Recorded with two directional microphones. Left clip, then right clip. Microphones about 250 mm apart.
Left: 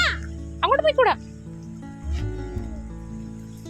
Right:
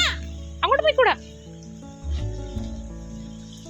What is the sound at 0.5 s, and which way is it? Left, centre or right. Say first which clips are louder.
Speech: even; centre.